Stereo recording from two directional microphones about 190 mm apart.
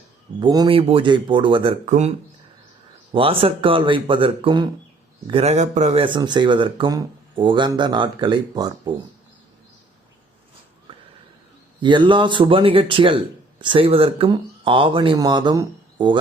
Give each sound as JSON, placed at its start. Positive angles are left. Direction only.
{"t": 0.3, "sound": "a man's voice", "side_deg": -20}
{"t": 11.8, "sound": "a man's voice", "side_deg": -25}